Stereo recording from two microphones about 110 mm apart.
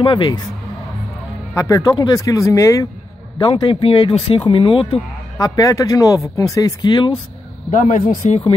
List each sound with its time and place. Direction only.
0.0 s speech: 45° left (ahead or behind)
1.5 s speech: 30° left (ahead or behind)
3.3 s speech: 45° left (ahead or behind)
5.4 s speech: 30° left (ahead or behind)
6.8 s speech: 40° left (ahead or behind)
7.7 s speech: 90° left